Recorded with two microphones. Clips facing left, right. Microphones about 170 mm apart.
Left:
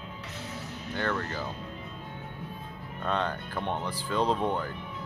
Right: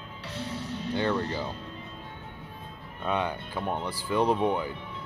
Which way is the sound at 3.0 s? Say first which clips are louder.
Right 1 dB; 10° right (ahead or behind).